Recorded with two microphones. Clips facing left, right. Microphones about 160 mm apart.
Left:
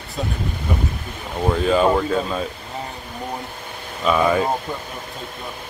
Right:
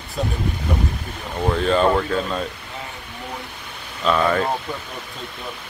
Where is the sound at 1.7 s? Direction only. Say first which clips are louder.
Left 1 dB; 5° left (ahead or behind).